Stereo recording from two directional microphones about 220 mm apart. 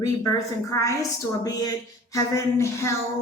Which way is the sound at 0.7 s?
15° left (ahead or behind).